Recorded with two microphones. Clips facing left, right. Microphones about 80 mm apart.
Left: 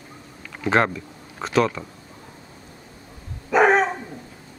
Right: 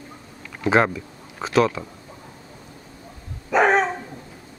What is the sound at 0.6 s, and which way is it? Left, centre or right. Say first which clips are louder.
Speech: right 1 dB; centre.